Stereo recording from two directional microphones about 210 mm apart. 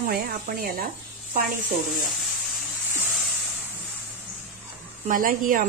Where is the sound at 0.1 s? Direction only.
45° right (ahead or behind).